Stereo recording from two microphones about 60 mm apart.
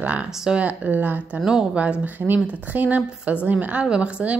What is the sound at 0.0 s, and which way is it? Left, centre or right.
Speech, right.